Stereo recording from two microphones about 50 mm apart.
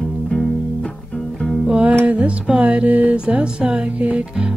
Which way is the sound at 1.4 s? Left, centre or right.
Centre.